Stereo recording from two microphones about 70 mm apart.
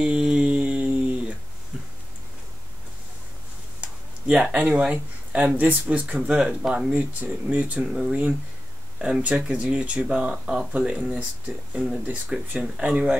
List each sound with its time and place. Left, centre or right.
0.0 s a sound: centre
3.8 s speech: centre
9.2 s speech: centre